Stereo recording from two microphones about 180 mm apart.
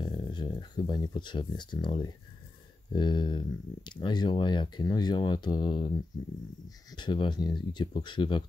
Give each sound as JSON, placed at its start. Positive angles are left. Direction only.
{"t": 0.0, "sound": "speech", "side_deg": 25}
{"t": 6.9, "sound": "speech", "side_deg": 25}